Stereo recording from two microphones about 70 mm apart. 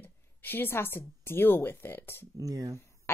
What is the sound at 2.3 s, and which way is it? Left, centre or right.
Speech, right.